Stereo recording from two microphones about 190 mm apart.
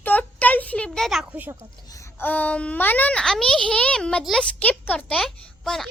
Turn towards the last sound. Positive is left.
turn(degrees=0)  # may be behind; listen again after turning